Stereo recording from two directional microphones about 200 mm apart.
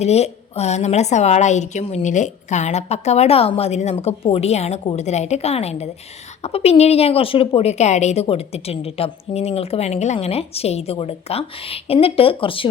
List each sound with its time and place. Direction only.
0.0 s speech: 30° left (ahead or behind)